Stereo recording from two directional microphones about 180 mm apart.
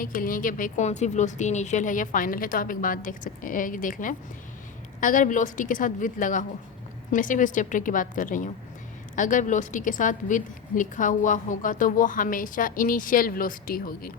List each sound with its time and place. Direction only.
0.0 s a woman's voice: 50° left (ahead or behind)